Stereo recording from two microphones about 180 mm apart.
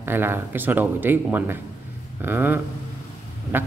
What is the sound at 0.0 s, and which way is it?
Speech, 10° right (ahead or behind).